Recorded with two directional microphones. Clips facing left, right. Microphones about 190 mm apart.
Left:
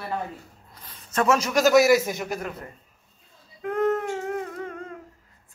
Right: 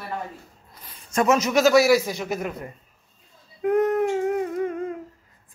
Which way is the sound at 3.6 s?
15° right (ahead or behind).